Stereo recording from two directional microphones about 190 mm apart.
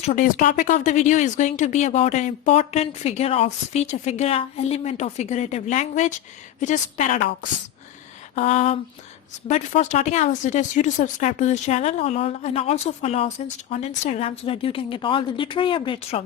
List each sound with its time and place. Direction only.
0.0 s speech: 40° left (ahead or behind)
8.4 s speech: 35° left (ahead or behind)